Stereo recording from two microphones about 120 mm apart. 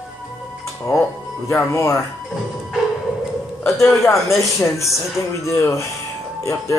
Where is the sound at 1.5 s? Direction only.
25° left (ahead or behind).